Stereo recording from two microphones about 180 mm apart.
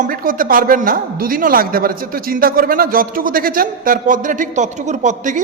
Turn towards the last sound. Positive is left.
turn(degrees=-45)  # may be behind; listen again after turning